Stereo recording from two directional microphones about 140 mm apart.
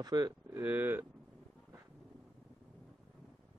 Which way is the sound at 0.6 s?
15° right (ahead or behind).